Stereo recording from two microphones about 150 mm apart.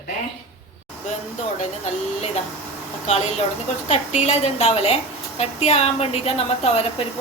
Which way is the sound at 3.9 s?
45° left (ahead or behind).